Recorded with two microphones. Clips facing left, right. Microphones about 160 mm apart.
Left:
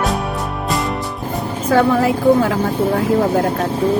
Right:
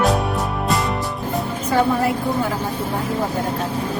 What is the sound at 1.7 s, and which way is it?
Speech, 90° left.